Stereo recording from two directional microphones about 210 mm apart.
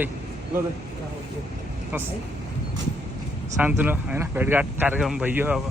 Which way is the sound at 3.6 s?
10° right (ahead or behind).